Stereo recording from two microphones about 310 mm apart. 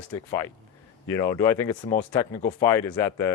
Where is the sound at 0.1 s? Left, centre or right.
Centre.